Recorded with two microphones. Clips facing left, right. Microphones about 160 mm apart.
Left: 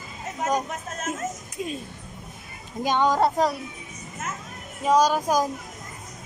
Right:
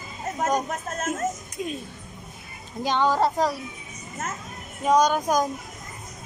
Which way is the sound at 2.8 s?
15° left (ahead or behind).